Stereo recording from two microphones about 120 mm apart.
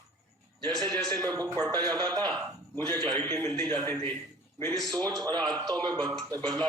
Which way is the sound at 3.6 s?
35° right (ahead or behind).